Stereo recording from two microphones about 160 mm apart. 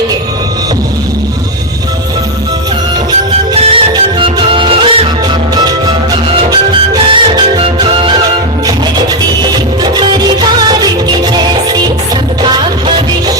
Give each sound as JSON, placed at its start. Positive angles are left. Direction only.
{"t": 3.5, "sound": "music", "side_deg": -40}
{"t": 5.5, "sound": "music", "side_deg": -25}
{"t": 7.1, "sound": "music", "side_deg": -30}
{"t": 11.3, "sound": "music", "side_deg": -25}